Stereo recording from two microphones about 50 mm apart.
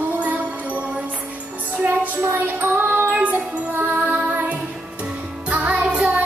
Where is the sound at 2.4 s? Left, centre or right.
Right.